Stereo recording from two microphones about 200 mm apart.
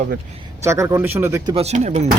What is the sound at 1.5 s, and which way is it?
Speech, 30° right (ahead or behind).